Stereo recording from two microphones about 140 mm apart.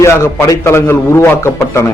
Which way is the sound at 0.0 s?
20° left (ahead or behind).